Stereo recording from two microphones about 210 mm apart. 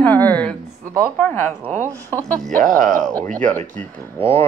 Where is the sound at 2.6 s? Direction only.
Centre (ahead or behind).